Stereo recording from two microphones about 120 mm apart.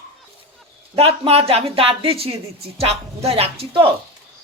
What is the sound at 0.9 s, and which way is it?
Speech, 55° right (ahead or behind).